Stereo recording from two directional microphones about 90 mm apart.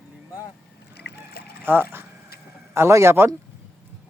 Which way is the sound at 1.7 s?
20° right (ahead or behind).